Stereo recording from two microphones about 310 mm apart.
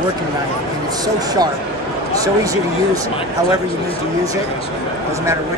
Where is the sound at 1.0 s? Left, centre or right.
Centre.